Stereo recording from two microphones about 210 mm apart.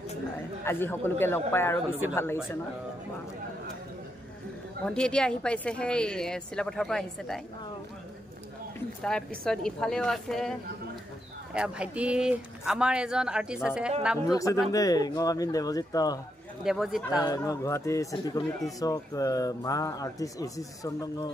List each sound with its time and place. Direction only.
0.7 s speech: 10° left (ahead or behind)
4.8 s a woman's voice: 5° left (ahead or behind)
9.0 s a woman's voice: 5° left (ahead or behind)
11.5 s a woman's voice: 5° right (ahead or behind)
14.2 s speech: 15° left (ahead or behind)
16.6 s a woman's voice: centre (ahead or behind)
17.2 s speech: 15° left (ahead or behind)